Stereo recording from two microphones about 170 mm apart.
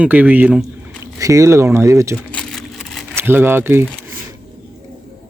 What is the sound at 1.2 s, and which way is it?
Speech, 20° right (ahead or behind).